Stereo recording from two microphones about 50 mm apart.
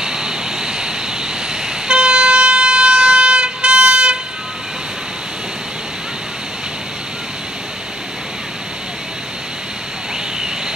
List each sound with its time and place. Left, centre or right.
0.0 s vehicle: centre